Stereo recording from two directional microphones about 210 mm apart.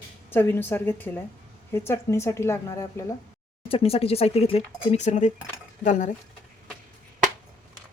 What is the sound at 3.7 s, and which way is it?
Speech, 25° left (ahead or behind).